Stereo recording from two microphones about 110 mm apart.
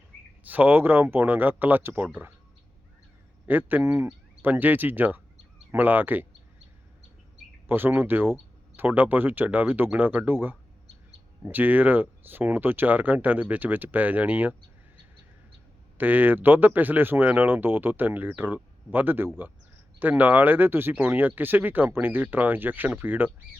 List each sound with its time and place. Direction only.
0.4 s speech: 15° right (ahead or behind)
3.4 s speech: 15° right (ahead or behind)
7.7 s speech: 20° right (ahead or behind)
16.0 s speech: 15° right (ahead or behind)